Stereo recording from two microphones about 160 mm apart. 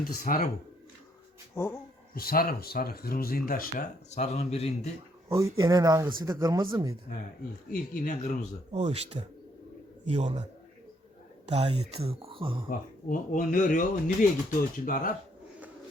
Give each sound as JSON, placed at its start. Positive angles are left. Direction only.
{"t": 0.0, "sound": "speech", "side_deg": 70}
{"t": 1.5, "sound": "speech", "side_deg": 15}
{"t": 2.1, "sound": "speech", "side_deg": 65}
{"t": 4.1, "sound": "speech", "side_deg": 45}
{"t": 5.3, "sound": "speech", "side_deg": -20}
{"t": 7.7, "sound": "speech", "side_deg": 60}
{"t": 8.7, "sound": "speech", "side_deg": -45}
{"t": 11.4, "sound": "speech", "side_deg": -40}
{"t": 13.1, "sound": "speech", "side_deg": 55}